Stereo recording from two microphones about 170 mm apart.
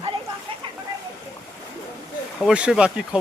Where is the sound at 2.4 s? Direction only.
5° right (ahead or behind).